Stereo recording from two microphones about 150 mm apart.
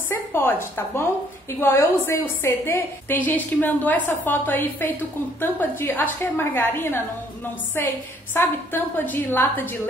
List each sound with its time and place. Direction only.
0.1 s a woman's voice: 15° left (ahead or behind)